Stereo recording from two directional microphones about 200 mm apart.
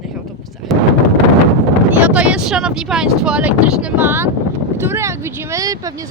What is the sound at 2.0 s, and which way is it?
Speech, 5° right (ahead or behind).